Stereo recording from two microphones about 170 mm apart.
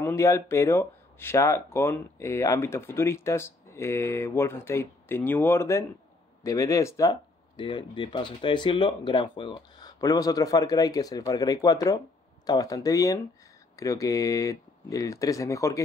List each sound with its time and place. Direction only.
0.0 s speech: 15° left (ahead or behind)